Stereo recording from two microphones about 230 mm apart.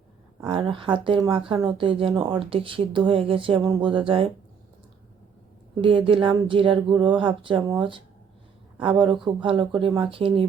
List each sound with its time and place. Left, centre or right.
0.4 s speech: right
5.8 s speech: right